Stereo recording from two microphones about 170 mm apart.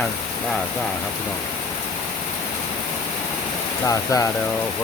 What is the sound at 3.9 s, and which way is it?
Speech, 20° left (ahead or behind).